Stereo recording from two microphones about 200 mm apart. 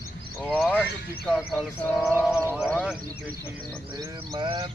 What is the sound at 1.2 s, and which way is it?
Speech, centre (ahead or behind).